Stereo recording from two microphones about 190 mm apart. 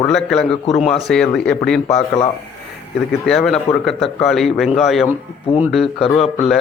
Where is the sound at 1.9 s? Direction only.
30° left (ahead or behind).